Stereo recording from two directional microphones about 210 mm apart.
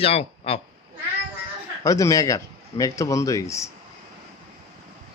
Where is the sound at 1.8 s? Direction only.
15° left (ahead or behind).